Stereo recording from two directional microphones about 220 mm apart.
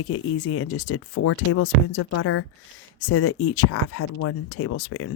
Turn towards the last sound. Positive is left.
turn(degrees=75)  # may be behind; listen again after turning